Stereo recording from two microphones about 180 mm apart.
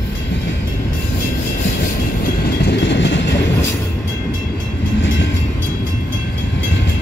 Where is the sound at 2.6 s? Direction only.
75° left (ahead or behind).